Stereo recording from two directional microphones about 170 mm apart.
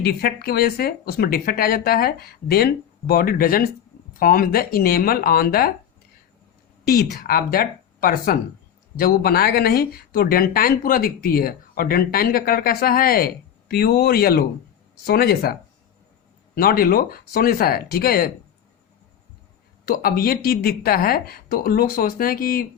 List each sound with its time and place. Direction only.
0.2 s speech: 65° left (ahead or behind)
6.8 s speech: 65° left (ahead or behind)
16.6 s speech: 60° left (ahead or behind)
19.8 s speech: 60° left (ahead or behind)